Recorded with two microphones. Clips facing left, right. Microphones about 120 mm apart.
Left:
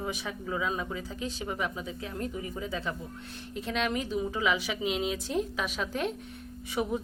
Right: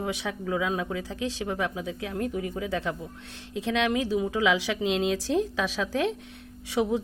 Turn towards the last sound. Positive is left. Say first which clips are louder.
# right 5 dB
turn(degrees=-80)